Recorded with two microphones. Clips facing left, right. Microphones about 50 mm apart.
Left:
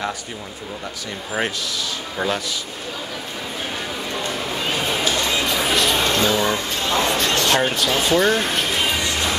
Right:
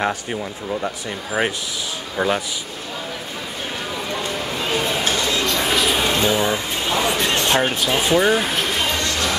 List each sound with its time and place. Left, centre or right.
1.4 s speech: centre
2.1 s speech: centre
5.5 s music: centre
6.1 s a sound: centre
7.6 s speech: centre